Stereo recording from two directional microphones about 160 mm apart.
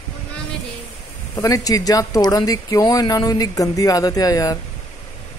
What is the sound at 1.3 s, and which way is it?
Speech, 20° left (ahead or behind).